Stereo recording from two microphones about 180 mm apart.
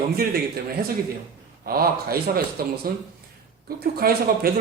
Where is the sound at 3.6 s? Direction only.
55° right (ahead or behind).